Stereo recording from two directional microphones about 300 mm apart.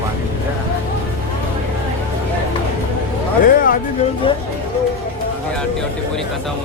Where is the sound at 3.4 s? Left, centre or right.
Left.